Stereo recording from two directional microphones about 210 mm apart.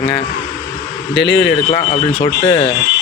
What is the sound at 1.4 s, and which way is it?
A man's voice, 25° left (ahead or behind).